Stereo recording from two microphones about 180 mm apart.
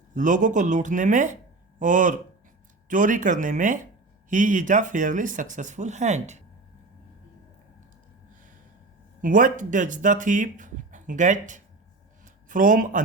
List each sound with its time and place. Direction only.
0.1 s speech: 45° right (ahead or behind)
9.2 s speech: 45° right (ahead or behind)
12.2 s a sound: 45° right (ahead or behind)